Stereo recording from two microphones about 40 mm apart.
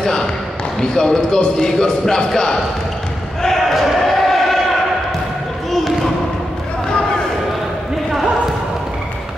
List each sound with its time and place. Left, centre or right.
0.0 s basketball bounce: centre
0.7 s speech: centre
3.4 s basketball bounce: centre